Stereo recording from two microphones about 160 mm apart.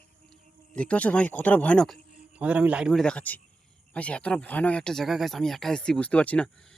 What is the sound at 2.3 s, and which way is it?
Speech, 10° right (ahead or behind).